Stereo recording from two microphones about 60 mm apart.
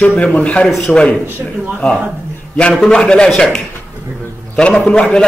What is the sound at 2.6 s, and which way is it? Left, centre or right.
Speech, centre.